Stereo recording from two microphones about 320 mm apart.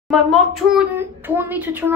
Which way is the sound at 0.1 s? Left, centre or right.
Centre.